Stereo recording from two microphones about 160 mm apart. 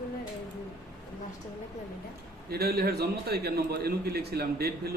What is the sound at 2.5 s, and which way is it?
A man's voice, 80° right.